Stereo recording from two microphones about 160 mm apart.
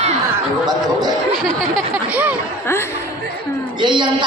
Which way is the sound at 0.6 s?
25° right (ahead or behind).